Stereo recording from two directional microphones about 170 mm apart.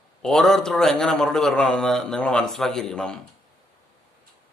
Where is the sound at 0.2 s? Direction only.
5° left (ahead or behind).